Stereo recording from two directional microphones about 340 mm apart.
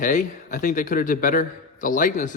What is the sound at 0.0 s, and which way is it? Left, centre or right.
Speech, left.